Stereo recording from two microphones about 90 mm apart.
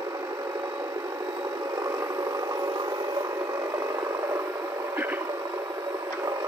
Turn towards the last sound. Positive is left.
turn(degrees=-20)  # may be behind; listen again after turning